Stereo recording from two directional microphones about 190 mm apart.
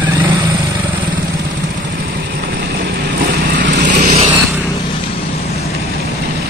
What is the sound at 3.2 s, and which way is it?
Vehicle, 55° right (ahead or behind).